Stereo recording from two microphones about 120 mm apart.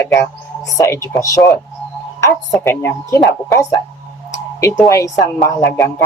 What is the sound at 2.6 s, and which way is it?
Speech, 25° left (ahead or behind).